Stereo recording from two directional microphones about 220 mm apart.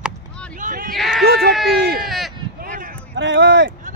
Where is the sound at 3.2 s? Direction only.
55° right (ahead or behind).